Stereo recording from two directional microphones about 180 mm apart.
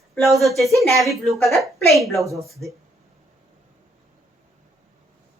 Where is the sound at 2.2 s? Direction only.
15° right (ahead or behind).